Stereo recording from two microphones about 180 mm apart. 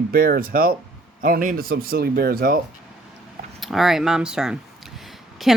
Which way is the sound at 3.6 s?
Centre (ahead or behind).